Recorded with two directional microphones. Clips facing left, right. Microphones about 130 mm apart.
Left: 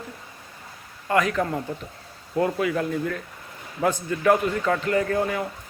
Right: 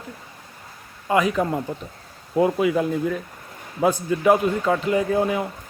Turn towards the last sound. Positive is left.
turn(degrees=-20)  # may be behind; listen again after turning